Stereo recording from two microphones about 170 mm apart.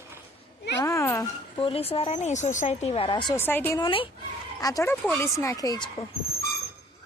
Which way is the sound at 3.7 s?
25° left (ahead or behind).